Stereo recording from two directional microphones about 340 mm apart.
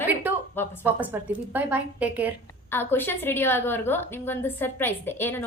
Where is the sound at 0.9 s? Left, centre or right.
Centre.